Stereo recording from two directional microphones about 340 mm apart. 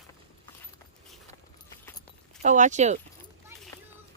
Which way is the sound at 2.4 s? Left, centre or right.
Right.